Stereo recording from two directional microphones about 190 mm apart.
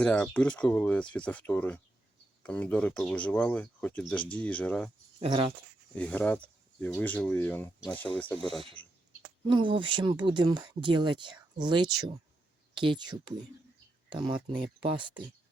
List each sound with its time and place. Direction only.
0.0 s speech: 5° left (ahead or behind)
5.2 s speech: 30° right (ahead or behind)
5.9 s speech: 5° left (ahead or behind)
9.5 s speech: 25° right (ahead or behind)